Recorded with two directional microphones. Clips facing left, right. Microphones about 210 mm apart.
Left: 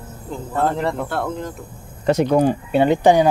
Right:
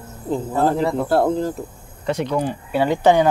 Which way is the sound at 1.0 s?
35° right (ahead or behind).